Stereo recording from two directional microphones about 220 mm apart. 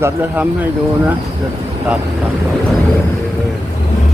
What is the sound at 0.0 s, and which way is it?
Speech, 10° right (ahead or behind).